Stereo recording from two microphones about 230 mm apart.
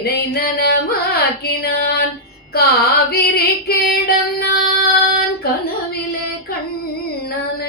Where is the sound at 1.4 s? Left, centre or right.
Left.